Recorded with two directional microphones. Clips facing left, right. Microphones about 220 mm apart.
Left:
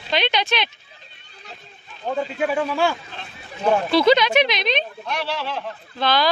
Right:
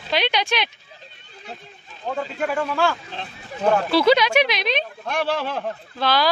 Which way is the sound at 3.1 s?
30° right (ahead or behind).